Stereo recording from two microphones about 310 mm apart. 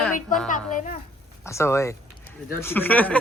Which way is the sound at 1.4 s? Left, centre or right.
Centre.